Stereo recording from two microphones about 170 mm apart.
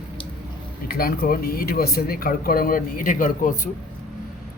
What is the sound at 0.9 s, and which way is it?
Speech, 60° left (ahead or behind).